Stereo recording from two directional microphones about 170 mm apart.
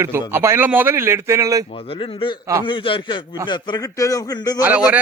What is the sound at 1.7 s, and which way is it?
A man's voice, 35° left (ahead or behind).